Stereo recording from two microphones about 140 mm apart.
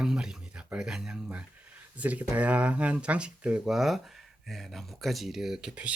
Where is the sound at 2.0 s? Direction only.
10° right (ahead or behind).